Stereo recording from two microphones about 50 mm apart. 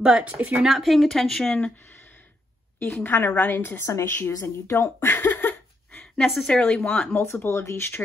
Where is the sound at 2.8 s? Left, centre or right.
Left.